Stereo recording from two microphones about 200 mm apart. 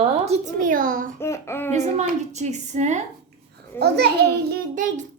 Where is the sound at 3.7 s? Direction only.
55° right (ahead or behind).